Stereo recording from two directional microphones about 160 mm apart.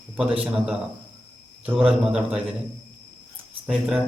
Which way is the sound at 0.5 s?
5° right (ahead or behind).